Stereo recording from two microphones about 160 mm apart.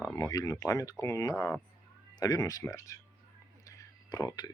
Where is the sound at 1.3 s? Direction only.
5° left (ahead or behind).